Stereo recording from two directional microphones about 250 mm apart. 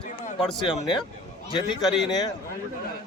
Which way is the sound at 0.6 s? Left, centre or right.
Centre.